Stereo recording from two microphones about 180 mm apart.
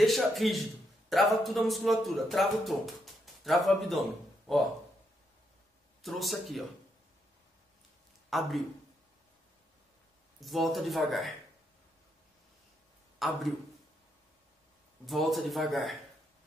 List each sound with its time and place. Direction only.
0.0 s speech: centre (ahead or behind)
6.0 s speech: centre (ahead or behind)
8.3 s speech: centre (ahead or behind)
10.4 s speech: centre (ahead or behind)
13.2 s speech: centre (ahead or behind)
15.0 s speech: centre (ahead or behind)